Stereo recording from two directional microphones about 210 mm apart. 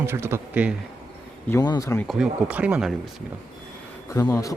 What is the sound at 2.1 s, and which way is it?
Speech, 5° right (ahead or behind).